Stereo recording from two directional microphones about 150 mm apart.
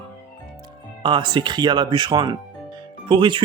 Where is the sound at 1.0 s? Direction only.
30° right (ahead or behind).